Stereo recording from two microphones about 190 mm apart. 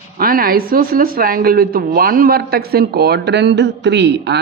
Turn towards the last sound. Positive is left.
turn(degrees=-65)  # may be behind; listen again after turning